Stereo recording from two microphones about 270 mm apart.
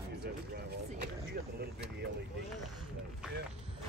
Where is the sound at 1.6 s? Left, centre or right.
Right.